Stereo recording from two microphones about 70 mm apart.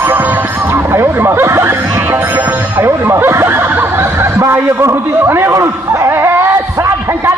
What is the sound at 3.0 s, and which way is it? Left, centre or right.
Snicker, right.